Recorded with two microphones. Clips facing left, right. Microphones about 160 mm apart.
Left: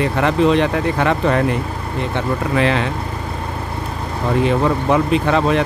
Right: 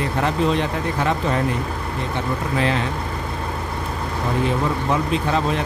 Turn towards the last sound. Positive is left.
turn(degrees=70)  # may be behind; listen again after turning